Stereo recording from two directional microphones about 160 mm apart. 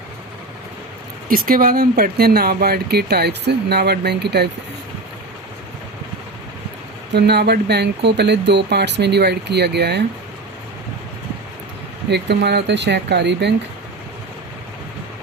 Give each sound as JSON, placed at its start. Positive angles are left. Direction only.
{"t": 1.3, "sound": "speech", "side_deg": -60}
{"t": 7.1, "sound": "speech", "side_deg": -90}
{"t": 12.1, "sound": "speech", "side_deg": -90}